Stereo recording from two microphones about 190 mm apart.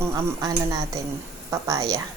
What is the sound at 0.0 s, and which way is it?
Speech, 15° right (ahead or behind).